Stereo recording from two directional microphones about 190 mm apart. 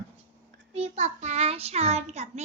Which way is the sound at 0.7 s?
35° right (ahead or behind).